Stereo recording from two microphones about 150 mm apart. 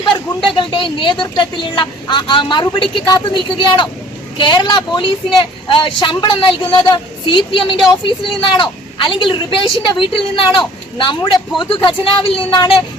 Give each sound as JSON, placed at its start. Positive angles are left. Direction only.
{"t": 0.0, "sound": "a woman's voice", "side_deg": 35}